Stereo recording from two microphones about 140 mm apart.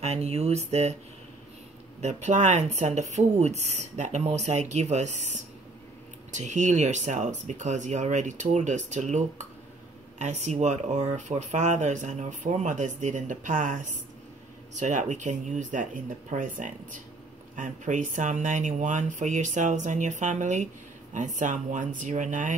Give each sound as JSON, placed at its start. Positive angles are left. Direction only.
{"t": 0.0, "sound": "speech", "side_deg": -50}
{"t": 2.0, "sound": "speech", "side_deg": -55}